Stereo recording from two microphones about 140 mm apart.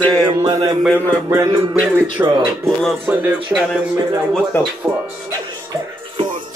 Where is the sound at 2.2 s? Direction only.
15° right (ahead or behind).